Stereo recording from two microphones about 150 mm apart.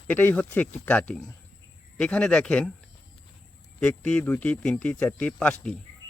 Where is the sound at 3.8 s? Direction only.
5° left (ahead or behind).